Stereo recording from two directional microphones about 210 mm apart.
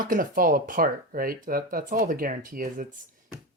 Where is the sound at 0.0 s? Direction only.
40° right (ahead or behind).